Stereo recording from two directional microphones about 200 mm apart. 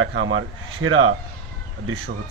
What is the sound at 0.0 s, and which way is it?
Speech, 80° right.